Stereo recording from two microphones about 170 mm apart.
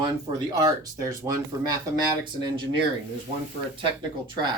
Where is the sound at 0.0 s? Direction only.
25° right (ahead or behind).